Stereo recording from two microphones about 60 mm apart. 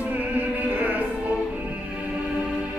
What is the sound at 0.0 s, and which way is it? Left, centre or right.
Music, right.